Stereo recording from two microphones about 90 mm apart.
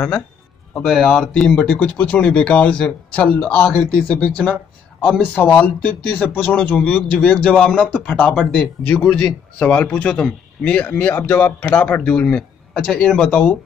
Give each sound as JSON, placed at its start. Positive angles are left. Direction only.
{"t": 0.8, "sound": "speech", "side_deg": 5}
{"t": 10.1, "sound": "speech", "side_deg": 10}